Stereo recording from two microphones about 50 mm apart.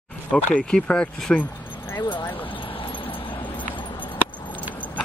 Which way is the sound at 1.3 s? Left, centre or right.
Left.